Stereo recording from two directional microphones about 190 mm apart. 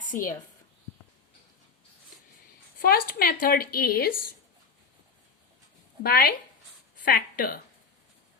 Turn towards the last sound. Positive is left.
turn(degrees=50)  # may be behind; listen again after turning